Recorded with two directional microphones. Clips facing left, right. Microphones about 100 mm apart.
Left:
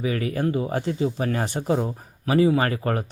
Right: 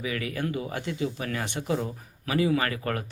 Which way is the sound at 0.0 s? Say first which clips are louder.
Left 6 dB; 35° left (ahead or behind).